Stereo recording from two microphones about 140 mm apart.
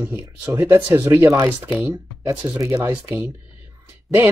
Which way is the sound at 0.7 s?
15° right (ahead or behind).